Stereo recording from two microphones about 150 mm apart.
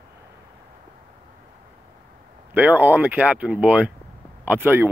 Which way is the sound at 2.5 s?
10° right (ahead or behind).